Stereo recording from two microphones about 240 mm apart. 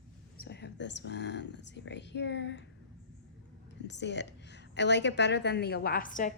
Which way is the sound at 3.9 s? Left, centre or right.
Left.